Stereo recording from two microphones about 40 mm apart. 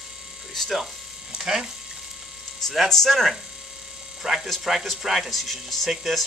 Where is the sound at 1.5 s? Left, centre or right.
Right.